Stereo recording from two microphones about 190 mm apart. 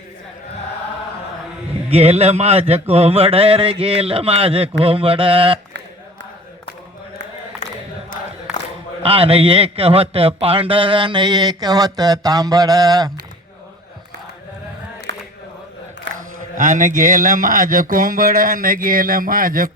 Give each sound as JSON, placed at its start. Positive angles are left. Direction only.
{"t": 1.9, "sound": "a man's voice", "side_deg": -35}
{"t": 7.6, "sound": "chant", "side_deg": 40}
{"t": 9.0, "sound": "a man's voice", "side_deg": -30}
{"t": 15.1, "sound": "a sound", "side_deg": -65}
{"t": 16.1, "sound": "mantra", "side_deg": -70}
{"t": 16.6, "sound": "speech", "side_deg": -45}